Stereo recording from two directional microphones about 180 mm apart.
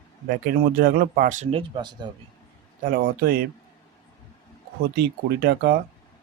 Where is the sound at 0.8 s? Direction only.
55° right (ahead or behind); by 2.0 s 25° right (ahead or behind).